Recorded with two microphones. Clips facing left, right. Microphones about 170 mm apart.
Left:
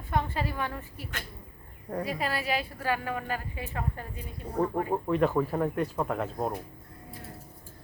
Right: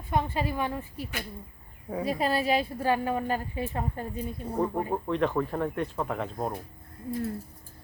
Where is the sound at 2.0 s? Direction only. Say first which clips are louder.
Right 6 dB; 30° right (ahead or behind).